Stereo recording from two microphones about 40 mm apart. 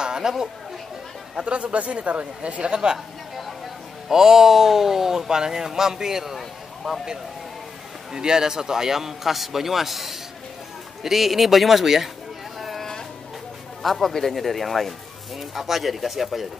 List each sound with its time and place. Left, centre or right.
0.0 s chatter: centre
1.4 s speech: right
4.1 s speech: centre
6.3 s a sound: centre
8.1 s speech: centre
12.5 s a sound: centre
13.8 s speech: centre